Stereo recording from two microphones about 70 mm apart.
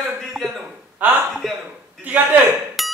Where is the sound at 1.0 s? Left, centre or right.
Right.